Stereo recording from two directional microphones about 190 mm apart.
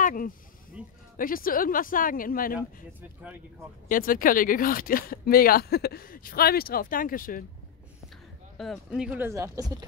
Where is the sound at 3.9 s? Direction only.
45° left (ahead or behind).